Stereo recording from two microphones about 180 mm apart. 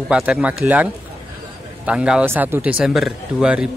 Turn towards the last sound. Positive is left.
turn(degrees=-5)  # may be behind; listen again after turning